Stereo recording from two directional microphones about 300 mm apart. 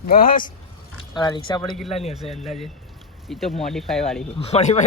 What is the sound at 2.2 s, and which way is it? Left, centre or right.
Speech, centre.